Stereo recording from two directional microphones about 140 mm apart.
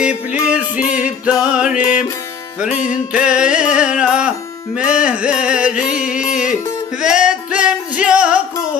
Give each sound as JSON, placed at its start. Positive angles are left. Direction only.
{"t": 0.3, "sound": "music", "side_deg": -10}
{"t": 0.8, "sound": "music", "side_deg": 65}
{"t": 1.2, "sound": "music", "side_deg": -5}
{"t": 3.1, "sound": "music", "side_deg": -5}